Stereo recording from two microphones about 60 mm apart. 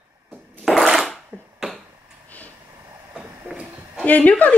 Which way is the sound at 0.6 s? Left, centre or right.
Centre.